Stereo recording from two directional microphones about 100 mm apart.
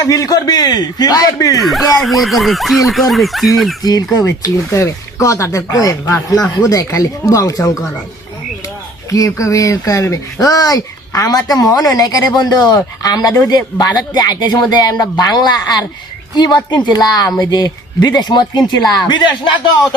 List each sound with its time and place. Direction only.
0.0 s speech: 35° left (ahead or behind)
1.6 s speech: centre (ahead or behind)
3.8 s speech: 40° left (ahead or behind)
9.0 s speech: 35° left (ahead or behind)